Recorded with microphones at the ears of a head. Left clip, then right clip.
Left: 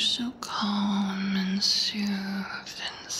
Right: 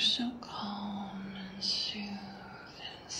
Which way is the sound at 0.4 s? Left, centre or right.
Left.